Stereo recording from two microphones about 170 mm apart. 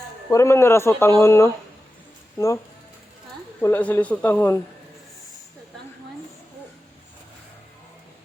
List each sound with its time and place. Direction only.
0.3 s speech: 15° left (ahead or behind)
3.6 s speech: 10° left (ahead or behind)